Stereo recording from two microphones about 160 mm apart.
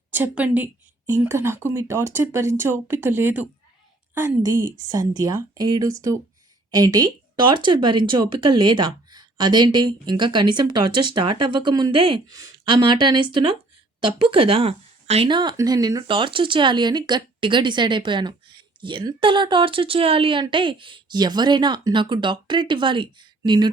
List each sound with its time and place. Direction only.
0.1 s a woman's voice: 10° right (ahead or behind); by 23.6 s 25° right (ahead or behind)